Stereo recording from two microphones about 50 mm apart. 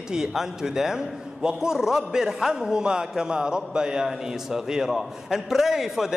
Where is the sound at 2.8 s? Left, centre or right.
Centre.